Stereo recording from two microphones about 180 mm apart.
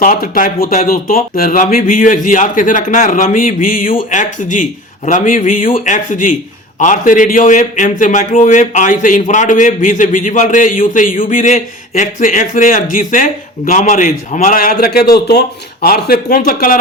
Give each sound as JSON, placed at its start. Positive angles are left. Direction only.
{"t": 0.0, "sound": "a man's voice", "side_deg": 50}